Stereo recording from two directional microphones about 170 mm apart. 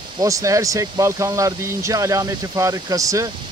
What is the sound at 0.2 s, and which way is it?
Speech, 20° right (ahead or behind).